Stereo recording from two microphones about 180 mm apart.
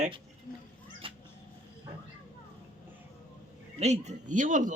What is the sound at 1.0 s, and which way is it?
Cat, 30° right (ahead or behind).